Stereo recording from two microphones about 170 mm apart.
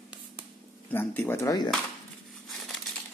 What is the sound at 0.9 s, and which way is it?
Speech, 10° left (ahead or behind).